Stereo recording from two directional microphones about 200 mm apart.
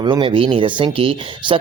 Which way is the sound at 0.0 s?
25° right (ahead or behind).